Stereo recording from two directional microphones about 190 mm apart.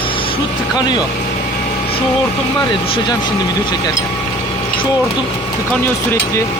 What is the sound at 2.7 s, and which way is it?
Speech, 25° left (ahead or behind).